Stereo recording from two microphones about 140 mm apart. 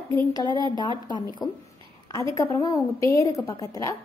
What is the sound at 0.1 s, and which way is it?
A woman's voice, 25° left (ahead or behind).